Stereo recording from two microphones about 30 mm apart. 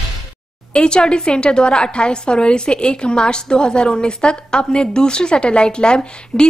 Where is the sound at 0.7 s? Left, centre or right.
Left.